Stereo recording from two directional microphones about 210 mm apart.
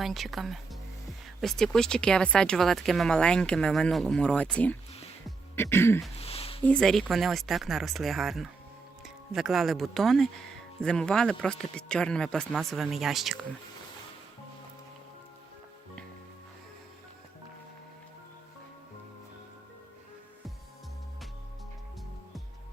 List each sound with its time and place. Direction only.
0.0 s speech: centre (ahead or behind)
5.5 s throat clearing: 10° left (ahead or behind)
6.1 s a sound: 30° left (ahead or behind)
6.7 s speech: 5° left (ahead or behind)